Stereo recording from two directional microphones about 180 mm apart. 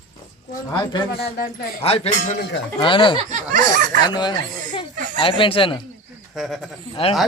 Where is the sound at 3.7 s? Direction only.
50° right (ahead or behind).